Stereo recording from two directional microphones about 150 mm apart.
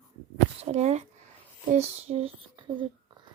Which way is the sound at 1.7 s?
45° right (ahead or behind).